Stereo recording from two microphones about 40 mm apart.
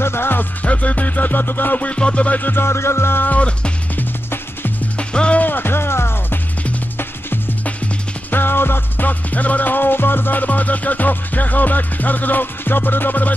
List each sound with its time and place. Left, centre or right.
0.0 s music: left
0.7 s music: left
1.8 s music: left
2.5 s music: left
3.3 s music: left
4.9 s music: left
5.4 s music: left
8.3 s music: left
9.0 s music: left